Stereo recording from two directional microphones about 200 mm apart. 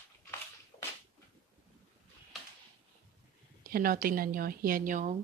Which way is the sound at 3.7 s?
45° right (ahead or behind).